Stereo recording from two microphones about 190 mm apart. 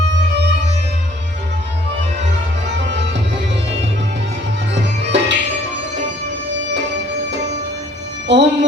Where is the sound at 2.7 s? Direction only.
65° right (ahead or behind).